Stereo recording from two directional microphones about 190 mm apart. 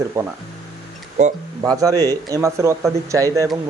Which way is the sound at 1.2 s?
40° right (ahead or behind).